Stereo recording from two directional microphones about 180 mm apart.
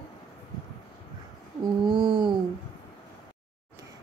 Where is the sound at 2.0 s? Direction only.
25° right (ahead or behind).